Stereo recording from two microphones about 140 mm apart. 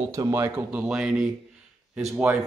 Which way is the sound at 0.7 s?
5° right (ahead or behind).